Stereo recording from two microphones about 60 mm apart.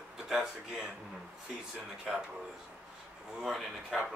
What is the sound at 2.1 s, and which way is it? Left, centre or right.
Speech, centre.